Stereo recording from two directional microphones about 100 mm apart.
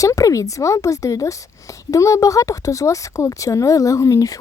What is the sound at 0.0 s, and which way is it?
A woman's voice, 35° left (ahead or behind).